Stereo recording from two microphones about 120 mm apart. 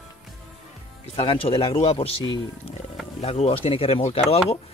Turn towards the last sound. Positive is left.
turn(degrees=55)  # may be behind; listen again after turning